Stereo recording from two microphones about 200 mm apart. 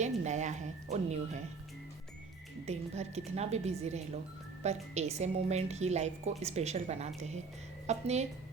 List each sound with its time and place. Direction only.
0.0 s speech: 35° right (ahead or behind)
2.6 s a woman's voice: 35° right (ahead or behind)